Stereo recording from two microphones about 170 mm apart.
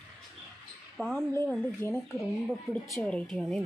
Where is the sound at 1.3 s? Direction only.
15° left (ahead or behind).